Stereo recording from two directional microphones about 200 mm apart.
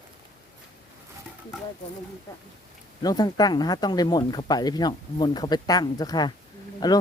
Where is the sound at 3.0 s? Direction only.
20° left (ahead or behind).